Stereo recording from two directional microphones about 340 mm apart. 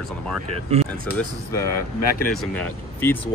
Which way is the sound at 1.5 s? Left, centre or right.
Centre.